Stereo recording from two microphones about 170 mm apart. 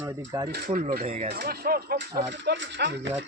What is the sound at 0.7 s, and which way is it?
Speech, 60° right (ahead or behind).